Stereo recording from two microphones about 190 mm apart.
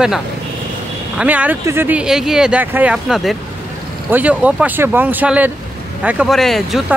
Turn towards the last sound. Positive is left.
turn(degrees=0)  # may be behind; listen again after turning